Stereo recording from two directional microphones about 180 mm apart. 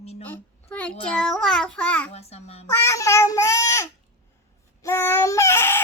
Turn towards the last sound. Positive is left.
turn(degrees=15)  # may be behind; listen again after turning